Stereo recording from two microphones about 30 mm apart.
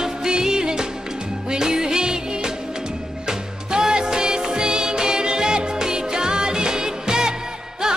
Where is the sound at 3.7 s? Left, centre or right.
Right.